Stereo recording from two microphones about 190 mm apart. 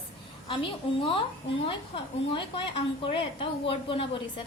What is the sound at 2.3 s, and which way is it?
A woman's voice, 25° left (ahead or behind).